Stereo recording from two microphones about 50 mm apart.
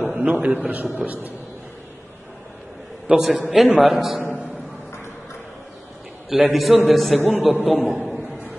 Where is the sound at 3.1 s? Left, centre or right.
Centre.